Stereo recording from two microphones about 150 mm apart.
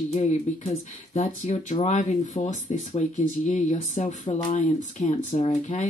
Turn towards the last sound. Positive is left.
turn(degrees=50)  # may be behind; listen again after turning